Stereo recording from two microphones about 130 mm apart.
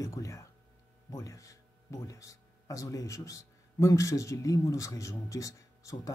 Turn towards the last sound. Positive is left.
turn(degrees=25)  # may be behind; listen again after turning